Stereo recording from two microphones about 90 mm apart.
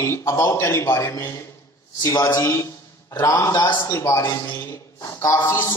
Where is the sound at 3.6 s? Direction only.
55° left (ahead or behind).